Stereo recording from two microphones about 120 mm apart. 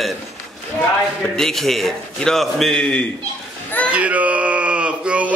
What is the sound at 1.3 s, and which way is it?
A man's voice, 5° left (ahead or behind).